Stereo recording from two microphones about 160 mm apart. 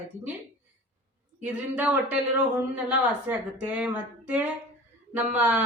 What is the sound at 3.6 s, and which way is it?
Speech, 10° right (ahead or behind).